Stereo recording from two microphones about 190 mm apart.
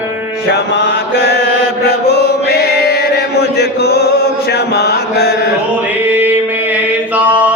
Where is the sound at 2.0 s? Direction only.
60° left (ahead or behind).